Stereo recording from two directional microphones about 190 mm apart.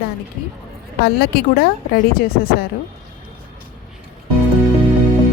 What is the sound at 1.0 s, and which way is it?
A woman's voice, 55° left (ahead or behind).